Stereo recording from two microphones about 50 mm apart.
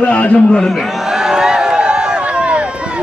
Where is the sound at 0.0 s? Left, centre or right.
Left.